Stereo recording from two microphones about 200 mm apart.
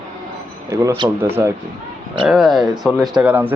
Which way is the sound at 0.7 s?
15° right (ahead or behind).